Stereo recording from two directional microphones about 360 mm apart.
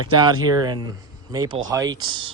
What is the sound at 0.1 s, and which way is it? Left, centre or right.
Speech, centre.